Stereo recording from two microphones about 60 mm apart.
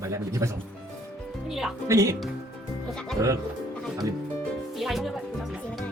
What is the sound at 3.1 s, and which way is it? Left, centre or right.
Speech, right.